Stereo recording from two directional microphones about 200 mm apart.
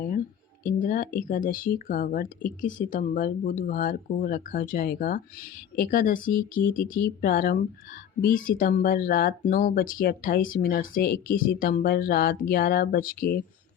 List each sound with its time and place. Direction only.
0.6 s speech: 45° left (ahead or behind)